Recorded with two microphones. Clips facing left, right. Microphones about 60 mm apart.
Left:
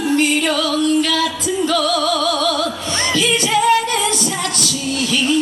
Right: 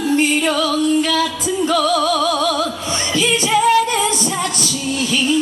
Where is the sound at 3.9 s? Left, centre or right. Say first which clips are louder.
Right 1 dB; centre.